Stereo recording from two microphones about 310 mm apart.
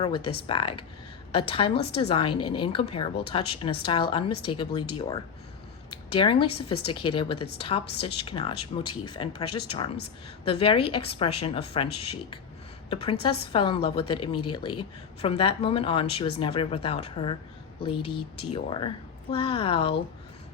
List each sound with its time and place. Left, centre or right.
0.0 s a woman's voice: centre
5.9 s a woman's voice: centre
8.9 s speech: left
10.4 s a woman's voice: centre